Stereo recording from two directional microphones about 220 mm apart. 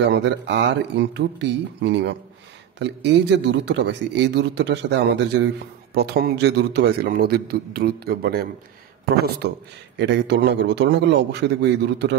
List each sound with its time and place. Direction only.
0.0 s speech: 50° right (ahead or behind)